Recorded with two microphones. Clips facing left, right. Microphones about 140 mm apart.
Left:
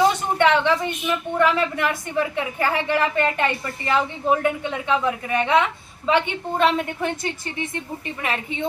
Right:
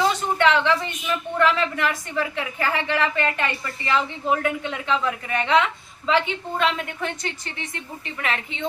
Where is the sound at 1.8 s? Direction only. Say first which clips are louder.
Left 2 dB; 20° left (ahead or behind).